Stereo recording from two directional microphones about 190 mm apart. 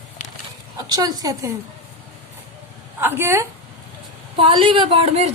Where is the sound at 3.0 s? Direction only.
10° right (ahead or behind).